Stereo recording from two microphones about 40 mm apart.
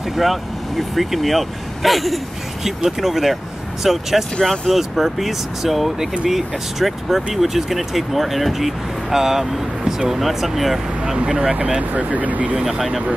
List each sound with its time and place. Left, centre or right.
0.1 s speech: centre
11.9 s speech: right
12.6 s speech: centre